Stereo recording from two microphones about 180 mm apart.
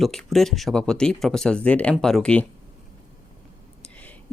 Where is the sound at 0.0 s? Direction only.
Centre (ahead or behind).